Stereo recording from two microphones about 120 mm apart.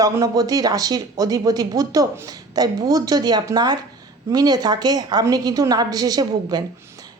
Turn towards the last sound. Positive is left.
turn(degrees=-30)  # may be behind; listen again after turning